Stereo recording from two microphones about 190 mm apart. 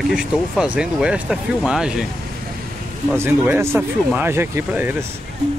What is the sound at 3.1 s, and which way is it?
Speech, 10° right (ahead or behind).